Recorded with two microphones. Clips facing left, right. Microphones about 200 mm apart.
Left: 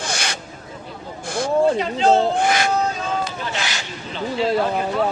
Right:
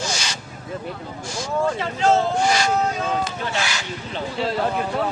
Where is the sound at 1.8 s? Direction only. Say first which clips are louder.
Left 2 dB; 20° left (ahead or behind).